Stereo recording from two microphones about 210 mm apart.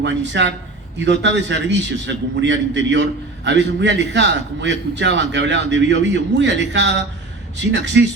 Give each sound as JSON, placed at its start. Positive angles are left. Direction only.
{"t": 0.0, "sound": "a man's voice", "side_deg": -55}